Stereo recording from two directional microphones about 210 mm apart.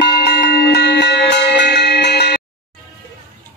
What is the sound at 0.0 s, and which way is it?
Music, 50° left (ahead or behind).